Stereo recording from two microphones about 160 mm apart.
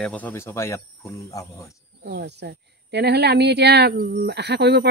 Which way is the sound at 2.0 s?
90° right.